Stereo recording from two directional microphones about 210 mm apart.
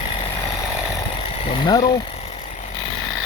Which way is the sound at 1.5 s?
20° left (ahead or behind).